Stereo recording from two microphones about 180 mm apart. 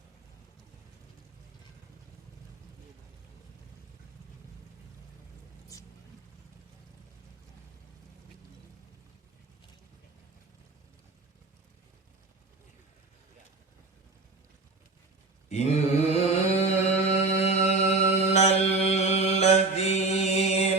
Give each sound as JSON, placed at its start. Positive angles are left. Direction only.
{"t": 15.4, "sound": "mantra", "side_deg": 40}